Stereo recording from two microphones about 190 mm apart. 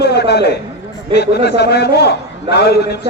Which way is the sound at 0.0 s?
60° left (ahead or behind).